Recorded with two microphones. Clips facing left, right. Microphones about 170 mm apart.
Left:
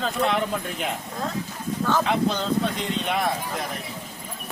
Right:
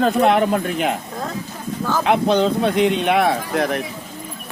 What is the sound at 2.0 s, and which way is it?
Speech, 70° right (ahead or behind).